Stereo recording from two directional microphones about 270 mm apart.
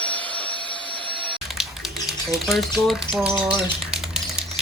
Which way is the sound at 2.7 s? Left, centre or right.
Centre.